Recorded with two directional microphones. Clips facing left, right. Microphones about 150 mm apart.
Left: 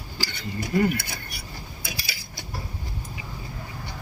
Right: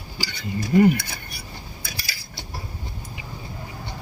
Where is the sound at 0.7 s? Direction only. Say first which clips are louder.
Right 6 dB; 20° right (ahead or behind).